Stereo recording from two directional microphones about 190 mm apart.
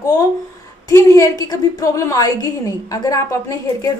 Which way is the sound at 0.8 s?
15° left (ahead or behind).